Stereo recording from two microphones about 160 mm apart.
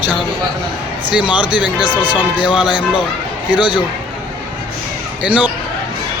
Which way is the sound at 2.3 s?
30° left (ahead or behind).